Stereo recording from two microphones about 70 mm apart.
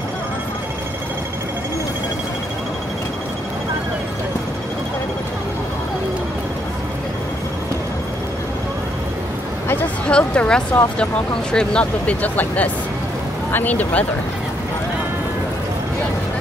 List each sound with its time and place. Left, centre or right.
10.0 s speech: centre